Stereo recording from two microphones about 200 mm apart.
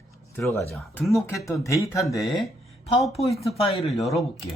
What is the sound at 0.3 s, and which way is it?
Speech, 10° left (ahead or behind).